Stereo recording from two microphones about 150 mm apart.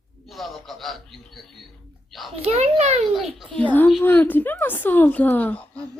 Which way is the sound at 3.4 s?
5° left (ahead or behind).